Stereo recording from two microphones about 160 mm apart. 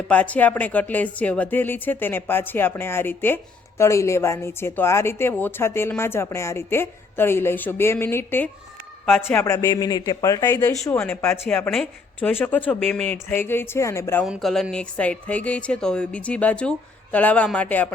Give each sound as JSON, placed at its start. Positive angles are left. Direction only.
{"t": 0.1, "sound": "speech", "side_deg": 10}
{"t": 14.3, "sound": "speech", "side_deg": 0}